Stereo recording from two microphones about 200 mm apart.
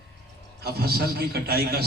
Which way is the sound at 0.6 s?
50° right (ahead or behind).